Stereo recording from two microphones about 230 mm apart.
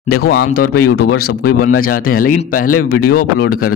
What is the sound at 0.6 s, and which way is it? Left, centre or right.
Speech, left.